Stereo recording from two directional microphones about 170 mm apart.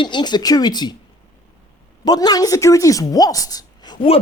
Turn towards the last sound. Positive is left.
turn(degrees=20)  # may be behind; listen again after turning